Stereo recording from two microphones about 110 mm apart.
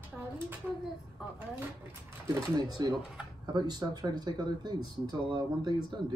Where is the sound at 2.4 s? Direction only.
35° right (ahead or behind).